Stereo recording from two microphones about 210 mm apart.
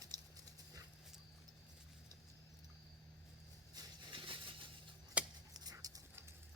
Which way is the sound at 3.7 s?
20° right (ahead or behind).